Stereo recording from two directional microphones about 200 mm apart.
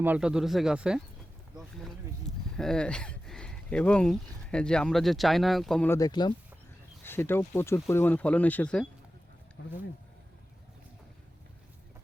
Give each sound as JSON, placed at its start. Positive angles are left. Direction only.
{"t": 0.0, "sound": "speech", "side_deg": -5}
{"t": 2.6, "sound": "speech", "side_deg": 5}
{"t": 9.6, "sound": "speech", "side_deg": 60}